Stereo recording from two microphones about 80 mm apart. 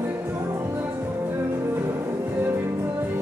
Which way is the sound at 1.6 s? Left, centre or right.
Right.